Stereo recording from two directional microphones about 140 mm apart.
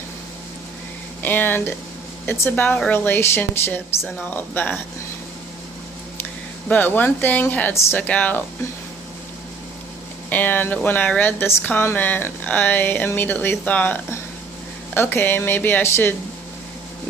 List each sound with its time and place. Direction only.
1.2 s speech: 15° left (ahead or behind)
6.7 s speech: 15° left (ahead or behind)
10.2 s speech: 10° left (ahead or behind)